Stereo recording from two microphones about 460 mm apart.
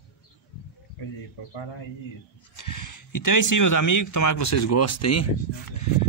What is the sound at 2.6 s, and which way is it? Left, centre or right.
Speech, left.